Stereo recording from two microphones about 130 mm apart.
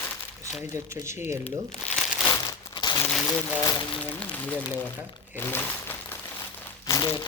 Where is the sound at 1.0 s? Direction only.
15° right (ahead or behind).